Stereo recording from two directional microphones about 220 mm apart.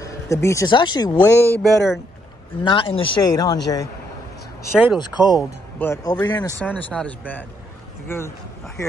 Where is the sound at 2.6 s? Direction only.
25° left (ahead or behind).